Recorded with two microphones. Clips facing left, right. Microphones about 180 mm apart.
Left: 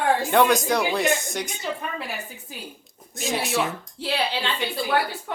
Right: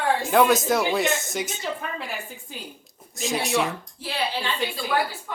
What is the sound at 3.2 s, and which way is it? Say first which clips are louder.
Speech: right 1 dB; centre (ahead or behind).